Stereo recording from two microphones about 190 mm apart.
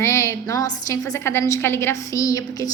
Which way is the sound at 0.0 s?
15° left (ahead or behind).